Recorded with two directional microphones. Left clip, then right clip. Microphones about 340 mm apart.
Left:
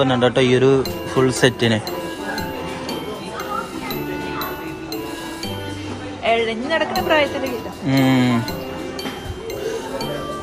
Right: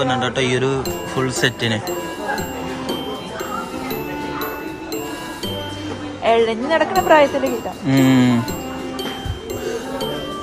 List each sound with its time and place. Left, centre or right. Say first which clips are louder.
0.0 s speech: left 3 dB; centre
6.2 s speech: right 3 dB; right
7.9 s a sound: right 2 dB; centre